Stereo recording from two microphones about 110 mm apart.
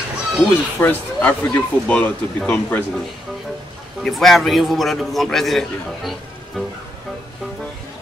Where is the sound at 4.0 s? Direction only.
Centre (ahead or behind).